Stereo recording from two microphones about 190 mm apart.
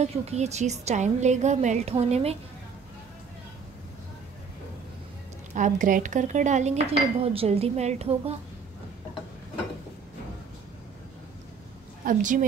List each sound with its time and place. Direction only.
0.0 s speech: 35° right (ahead or behind)
5.5 s speech: 40° right (ahead or behind)
12.0 s a woman's voice: 45° right (ahead or behind)